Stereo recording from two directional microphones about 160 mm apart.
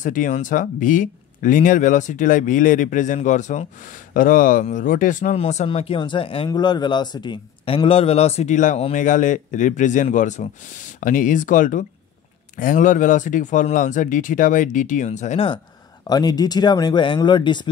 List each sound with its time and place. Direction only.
0.0 s speech: 55° left (ahead or behind)
5.4 s speech: 40° left (ahead or behind)
16.1 s speech: 25° left (ahead or behind)